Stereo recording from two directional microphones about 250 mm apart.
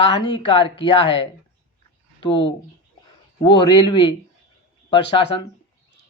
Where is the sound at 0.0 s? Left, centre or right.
Centre.